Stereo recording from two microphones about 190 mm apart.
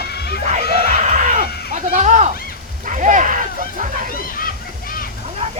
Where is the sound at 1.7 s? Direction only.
40° right (ahead or behind).